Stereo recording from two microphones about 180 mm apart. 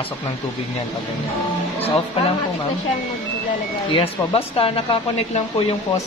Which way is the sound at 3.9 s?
35° left (ahead or behind).